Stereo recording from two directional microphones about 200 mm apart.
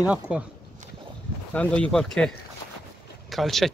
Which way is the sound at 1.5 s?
5° left (ahead or behind).